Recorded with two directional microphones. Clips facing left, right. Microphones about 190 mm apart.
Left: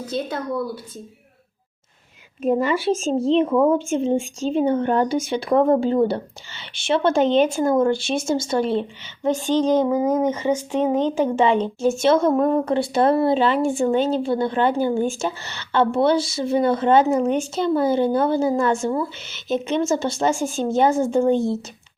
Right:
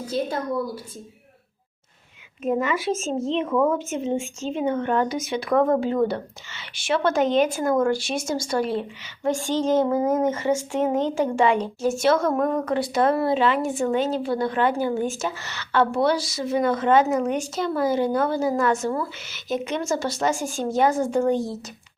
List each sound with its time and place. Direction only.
2.4 s a woman's voice: 35° left (ahead or behind)